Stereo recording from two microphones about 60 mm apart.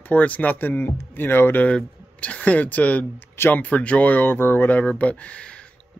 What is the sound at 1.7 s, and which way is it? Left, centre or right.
Speech, centre.